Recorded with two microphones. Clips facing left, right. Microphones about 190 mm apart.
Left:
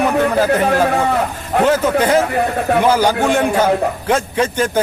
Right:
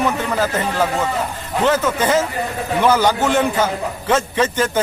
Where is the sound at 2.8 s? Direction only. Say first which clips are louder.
Right 1 dB; 10° left (ahead or behind).